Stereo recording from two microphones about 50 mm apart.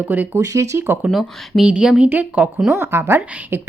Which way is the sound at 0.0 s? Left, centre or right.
Right.